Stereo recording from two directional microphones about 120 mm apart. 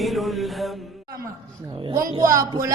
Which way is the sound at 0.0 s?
Centre (ahead or behind).